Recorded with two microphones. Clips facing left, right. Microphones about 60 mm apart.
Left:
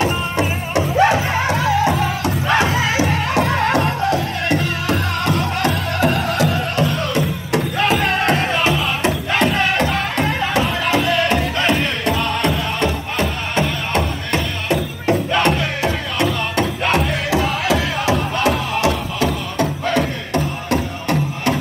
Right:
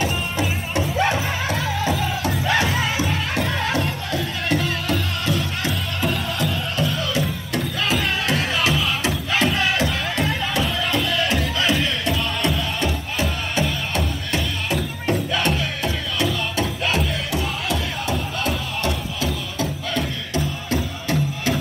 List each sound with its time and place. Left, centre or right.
0.0 s music: left
2.8 s music: left
5.9 s music: left
6.8 s music: left
8.4 s music: left
9.0 s music: left
12.8 s music: left
17.3 s music: left
18.9 s music: left